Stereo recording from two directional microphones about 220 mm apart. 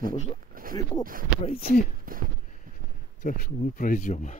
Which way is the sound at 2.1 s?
40° right (ahead or behind).